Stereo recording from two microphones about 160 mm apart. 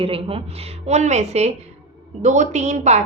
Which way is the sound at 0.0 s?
35° right (ahead or behind).